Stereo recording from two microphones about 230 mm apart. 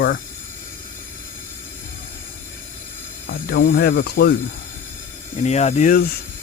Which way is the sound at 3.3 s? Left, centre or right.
Left.